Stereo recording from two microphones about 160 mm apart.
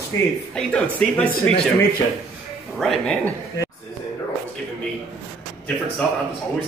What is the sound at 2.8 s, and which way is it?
Speech, 5° left (ahead or behind).